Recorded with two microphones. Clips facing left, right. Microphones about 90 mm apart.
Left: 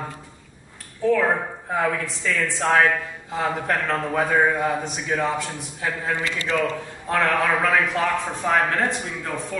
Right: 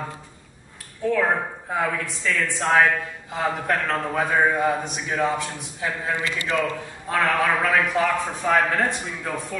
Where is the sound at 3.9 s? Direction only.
Centre (ahead or behind).